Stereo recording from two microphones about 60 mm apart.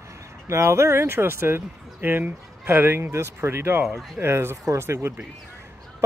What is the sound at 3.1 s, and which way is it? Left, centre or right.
Speech, right.